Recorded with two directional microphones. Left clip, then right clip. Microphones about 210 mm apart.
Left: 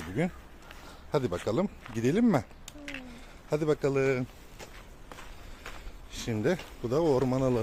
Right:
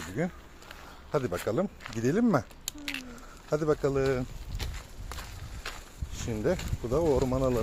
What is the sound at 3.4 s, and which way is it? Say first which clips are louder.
Speech: right 1 dB; 5° left (ahead or behind).